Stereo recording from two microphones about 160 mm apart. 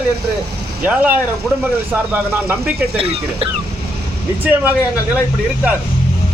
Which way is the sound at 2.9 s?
35° right (ahead or behind).